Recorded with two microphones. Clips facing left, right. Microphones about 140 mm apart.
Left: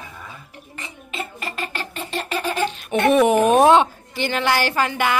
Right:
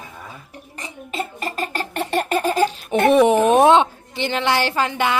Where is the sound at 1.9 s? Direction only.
55° right (ahead or behind); by 3.0 s 35° right (ahead or behind).